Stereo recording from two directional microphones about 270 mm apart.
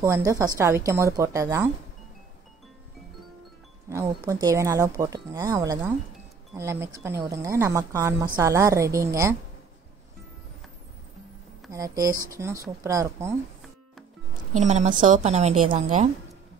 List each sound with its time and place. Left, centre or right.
0.0 s speech: centre
3.9 s speech: centre
11.7 s speech: centre
14.5 s a woman's voice: right